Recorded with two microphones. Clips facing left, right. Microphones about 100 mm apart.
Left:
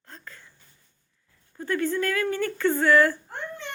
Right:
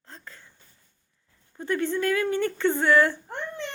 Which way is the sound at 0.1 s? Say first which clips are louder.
Even; 25° right (ahead or behind).